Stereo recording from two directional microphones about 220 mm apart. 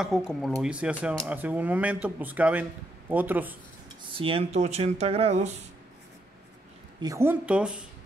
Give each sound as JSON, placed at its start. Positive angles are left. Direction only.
{"t": 0.0, "sound": "a woman's voice", "side_deg": 0}
{"t": 4.1, "sound": "speech", "side_deg": -25}
{"t": 7.0, "sound": "a woman's voice", "side_deg": -15}